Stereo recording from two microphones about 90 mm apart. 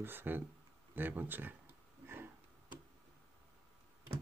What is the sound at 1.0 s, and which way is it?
Speech, 20° right (ahead or behind).